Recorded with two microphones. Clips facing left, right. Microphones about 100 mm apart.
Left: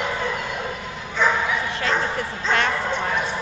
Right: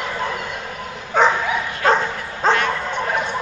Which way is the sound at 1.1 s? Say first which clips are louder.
Right 6 dB; 55° right (ahead or behind).